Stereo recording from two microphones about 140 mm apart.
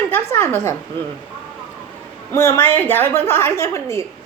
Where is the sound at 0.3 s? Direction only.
15° left (ahead or behind).